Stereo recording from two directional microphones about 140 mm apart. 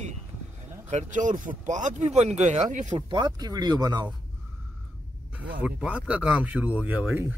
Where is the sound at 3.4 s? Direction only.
30° right (ahead or behind).